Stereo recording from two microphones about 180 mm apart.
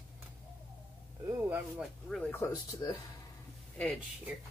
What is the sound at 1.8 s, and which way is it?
Speech, 5° left (ahead or behind).